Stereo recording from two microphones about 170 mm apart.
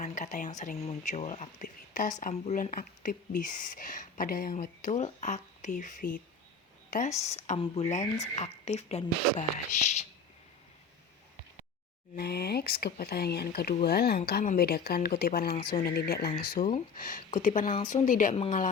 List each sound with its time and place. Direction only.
0.0 s speech: 45° left (ahead or behind)
12.1 s speech: 70° left (ahead or behind); by 18.3 s 50° left (ahead or behind)
18.3 s speech: 35° left (ahead or behind)